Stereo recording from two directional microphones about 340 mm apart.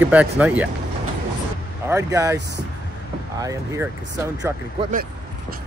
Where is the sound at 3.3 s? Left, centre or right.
Centre.